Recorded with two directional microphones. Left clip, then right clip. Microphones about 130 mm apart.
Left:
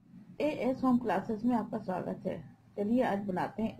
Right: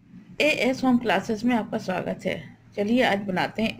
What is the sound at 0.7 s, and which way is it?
Speech, centre (ahead or behind).